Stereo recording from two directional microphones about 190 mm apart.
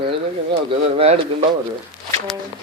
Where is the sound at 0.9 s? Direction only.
30° right (ahead or behind).